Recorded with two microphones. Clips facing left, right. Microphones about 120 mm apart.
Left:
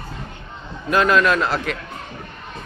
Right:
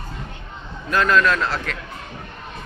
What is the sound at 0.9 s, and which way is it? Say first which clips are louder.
Speech: left 2 dB; 15° left (ahead or behind).